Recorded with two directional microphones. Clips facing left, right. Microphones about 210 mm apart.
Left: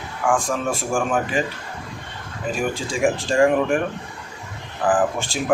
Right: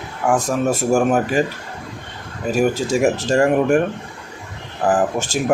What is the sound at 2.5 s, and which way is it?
Speech, 40° right (ahead or behind).